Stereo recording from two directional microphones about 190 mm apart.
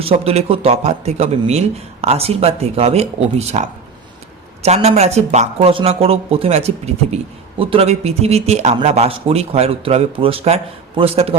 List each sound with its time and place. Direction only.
0.0 s speech: 30° right (ahead or behind)